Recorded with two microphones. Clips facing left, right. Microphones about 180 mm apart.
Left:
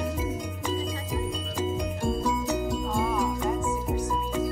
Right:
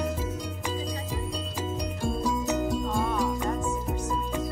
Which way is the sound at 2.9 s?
Centre (ahead or behind).